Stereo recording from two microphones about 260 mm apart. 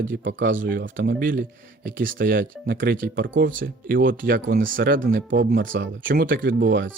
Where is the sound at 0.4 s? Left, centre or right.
Right.